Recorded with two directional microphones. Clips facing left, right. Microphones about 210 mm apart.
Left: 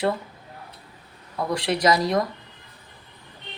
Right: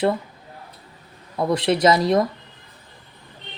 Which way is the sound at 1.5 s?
25° right (ahead or behind).